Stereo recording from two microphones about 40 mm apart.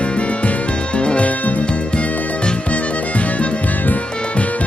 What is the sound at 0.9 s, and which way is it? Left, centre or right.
Music, left.